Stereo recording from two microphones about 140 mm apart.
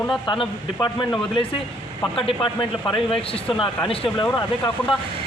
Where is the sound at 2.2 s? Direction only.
35° left (ahead or behind).